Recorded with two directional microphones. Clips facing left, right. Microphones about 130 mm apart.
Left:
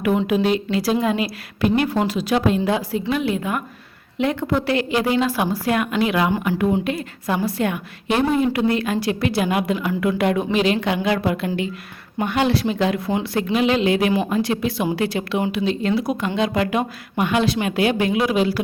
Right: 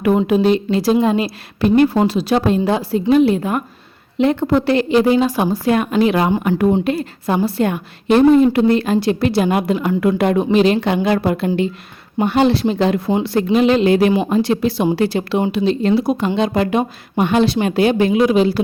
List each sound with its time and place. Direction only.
0.0 s a woman's voice: 35° right (ahead or behind)
14.1 s a woman's voice: 25° right (ahead or behind)